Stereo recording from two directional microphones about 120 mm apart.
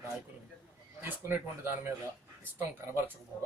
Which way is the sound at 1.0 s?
15° right (ahead or behind).